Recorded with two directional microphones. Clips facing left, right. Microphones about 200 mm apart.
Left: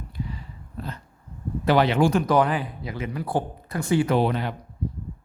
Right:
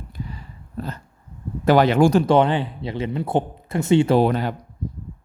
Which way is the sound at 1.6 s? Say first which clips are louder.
Right 4 dB; 45° right (ahead or behind).